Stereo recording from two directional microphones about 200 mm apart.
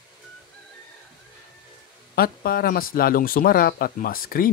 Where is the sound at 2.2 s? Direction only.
50° left (ahead or behind).